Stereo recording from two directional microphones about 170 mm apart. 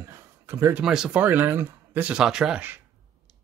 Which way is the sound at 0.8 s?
5° right (ahead or behind).